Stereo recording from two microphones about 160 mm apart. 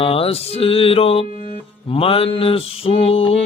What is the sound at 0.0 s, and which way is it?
Mantra, 35° left (ahead or behind).